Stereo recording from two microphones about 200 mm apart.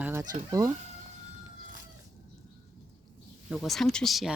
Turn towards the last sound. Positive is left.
turn(degrees=0)  # may be behind; listen again after turning